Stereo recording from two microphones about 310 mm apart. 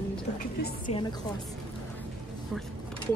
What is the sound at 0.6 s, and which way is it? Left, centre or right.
Speech, left.